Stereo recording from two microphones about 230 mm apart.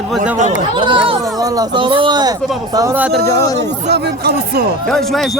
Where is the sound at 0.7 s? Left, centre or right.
Right.